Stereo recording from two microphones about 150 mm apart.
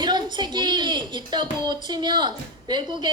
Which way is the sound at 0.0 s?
30° right (ahead or behind).